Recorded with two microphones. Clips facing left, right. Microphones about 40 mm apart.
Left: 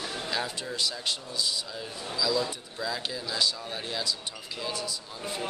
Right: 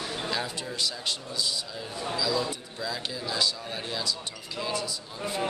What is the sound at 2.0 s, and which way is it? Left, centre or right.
Speech, right.